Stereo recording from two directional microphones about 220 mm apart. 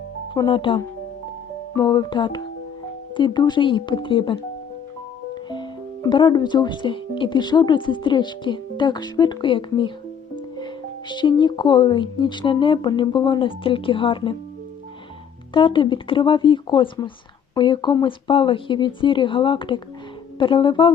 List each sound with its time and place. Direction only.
0.3 s speech: 20° left (ahead or behind)
11.1 s speech: 20° left (ahead or behind)
15.5 s speech: 20° left (ahead or behind)